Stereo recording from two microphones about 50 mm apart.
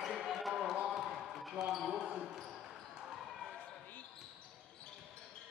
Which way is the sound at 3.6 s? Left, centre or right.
Left.